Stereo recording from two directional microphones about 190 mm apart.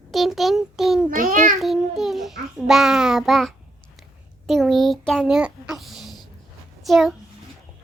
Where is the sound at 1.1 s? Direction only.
45° right (ahead or behind).